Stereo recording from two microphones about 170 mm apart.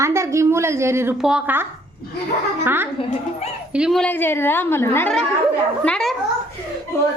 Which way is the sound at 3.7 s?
Centre (ahead or behind).